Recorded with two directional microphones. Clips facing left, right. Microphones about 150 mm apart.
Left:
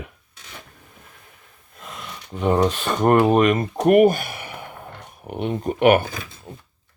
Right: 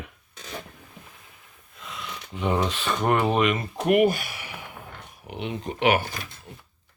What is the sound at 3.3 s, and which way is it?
Speech, 45° left (ahead or behind).